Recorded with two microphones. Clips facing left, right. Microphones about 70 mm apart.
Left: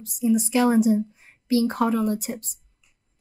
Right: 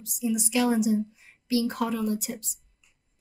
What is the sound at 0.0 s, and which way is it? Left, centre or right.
A woman's voice, left.